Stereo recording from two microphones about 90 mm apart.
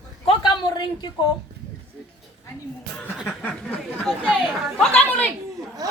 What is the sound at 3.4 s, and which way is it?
A woman's voice, 15° left (ahead or behind).